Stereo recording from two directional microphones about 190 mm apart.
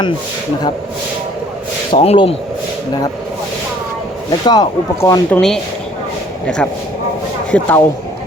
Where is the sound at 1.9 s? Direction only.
30° left (ahead or behind).